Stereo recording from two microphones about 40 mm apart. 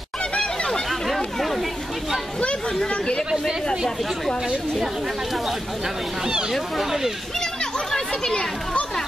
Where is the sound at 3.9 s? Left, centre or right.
Centre.